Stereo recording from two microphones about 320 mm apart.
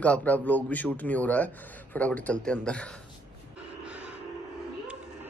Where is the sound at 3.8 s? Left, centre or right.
Centre.